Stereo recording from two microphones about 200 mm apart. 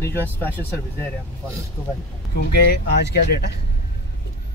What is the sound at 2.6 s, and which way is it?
Speech, 55° left (ahead or behind).